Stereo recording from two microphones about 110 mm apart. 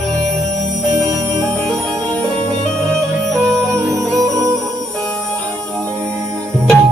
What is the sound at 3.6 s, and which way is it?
Music, 30° right (ahead or behind).